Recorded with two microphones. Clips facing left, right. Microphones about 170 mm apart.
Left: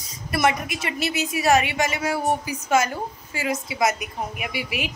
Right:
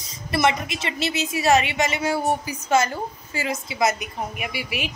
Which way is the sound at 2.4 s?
15° left (ahead or behind).